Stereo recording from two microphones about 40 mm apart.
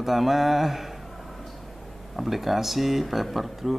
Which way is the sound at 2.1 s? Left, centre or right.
Centre.